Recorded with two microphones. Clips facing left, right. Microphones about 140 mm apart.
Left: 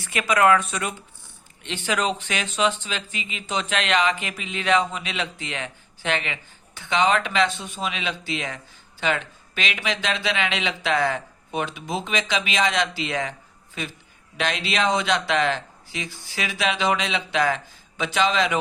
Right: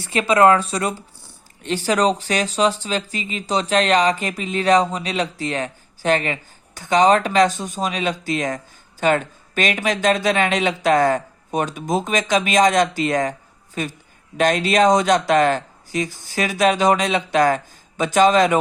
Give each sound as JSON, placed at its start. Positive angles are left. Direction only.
{"t": 0.0, "sound": "speech", "side_deg": -30}